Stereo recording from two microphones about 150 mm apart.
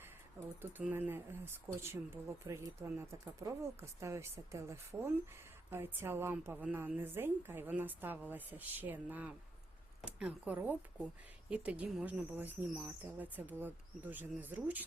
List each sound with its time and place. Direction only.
0.6 s speech: 10° right (ahead or behind)